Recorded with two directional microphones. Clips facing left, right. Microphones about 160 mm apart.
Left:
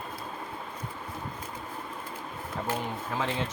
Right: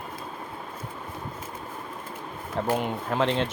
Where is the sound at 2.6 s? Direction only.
70° right (ahead or behind).